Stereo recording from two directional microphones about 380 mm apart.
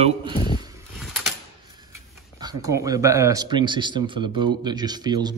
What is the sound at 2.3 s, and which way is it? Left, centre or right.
Speech, centre.